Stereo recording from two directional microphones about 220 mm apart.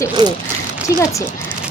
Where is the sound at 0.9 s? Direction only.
15° left (ahead or behind).